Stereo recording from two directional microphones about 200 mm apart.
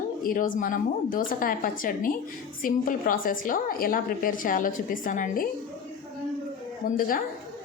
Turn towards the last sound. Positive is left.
turn(degrees=45)  # may be behind; listen again after turning